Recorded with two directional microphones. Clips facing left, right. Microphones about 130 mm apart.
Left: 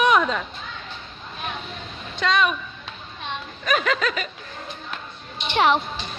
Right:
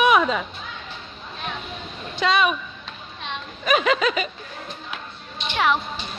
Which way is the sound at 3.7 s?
10° right (ahead or behind).